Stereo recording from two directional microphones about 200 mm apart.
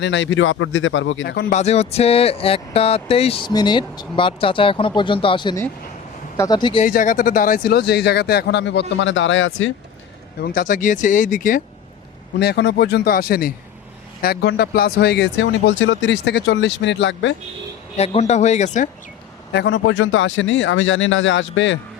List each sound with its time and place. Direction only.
0.0 s speech: 65° left (ahead or behind)
1.4 s speech: 40° left (ahead or behind); by 6.8 s 20° left (ahead or behind)
6.8 s speech: 40° left (ahead or behind); by 9.7 s 75° left (ahead or behind)
10.4 s speech: 45° left (ahead or behind)
12.4 s speech: 55° left (ahead or behind)
17.9 s speech: 30° left (ahead or behind)
19.5 s speech: 65° left (ahead or behind)